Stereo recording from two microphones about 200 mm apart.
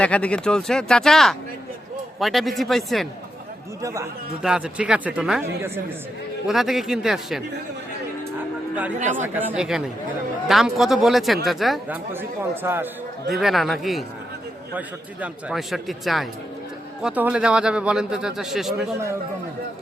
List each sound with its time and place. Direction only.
0.0 s speech: 5° left (ahead or behind)
4.4 s a man's voice: 5° right (ahead or behind)
9.0 s speech: 35° right (ahead or behind)
9.2 s speech: 10° right (ahead or behind)
12.1 s a man's voice: 10° right (ahead or behind)
13.2 s speech: centre (ahead or behind)